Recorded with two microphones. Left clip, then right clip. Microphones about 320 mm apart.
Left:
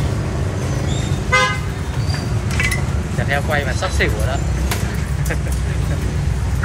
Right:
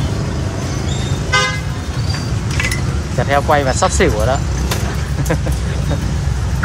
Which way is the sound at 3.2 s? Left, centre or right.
Centre.